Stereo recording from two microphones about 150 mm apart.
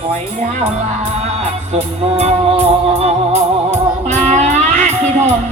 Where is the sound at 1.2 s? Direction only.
45° right (ahead or behind).